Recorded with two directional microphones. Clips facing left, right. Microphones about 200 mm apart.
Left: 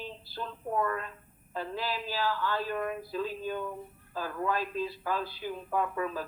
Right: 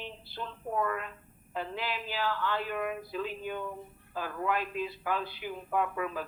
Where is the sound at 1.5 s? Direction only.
20° right (ahead or behind).